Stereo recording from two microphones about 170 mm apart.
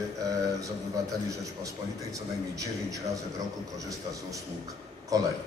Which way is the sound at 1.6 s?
20° right (ahead or behind).